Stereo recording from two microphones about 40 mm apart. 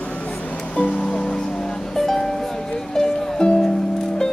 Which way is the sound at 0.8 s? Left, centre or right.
Left.